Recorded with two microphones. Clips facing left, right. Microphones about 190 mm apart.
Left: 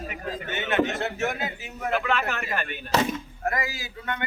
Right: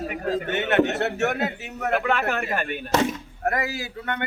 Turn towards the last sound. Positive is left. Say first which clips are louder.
# right 4 dB
turn(degrees=-60)  # may be behind; listen again after turning